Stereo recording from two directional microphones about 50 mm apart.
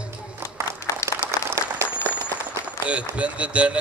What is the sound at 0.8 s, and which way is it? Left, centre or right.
Applause, left.